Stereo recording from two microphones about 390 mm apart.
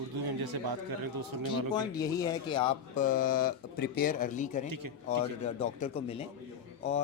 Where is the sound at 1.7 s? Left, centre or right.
Centre.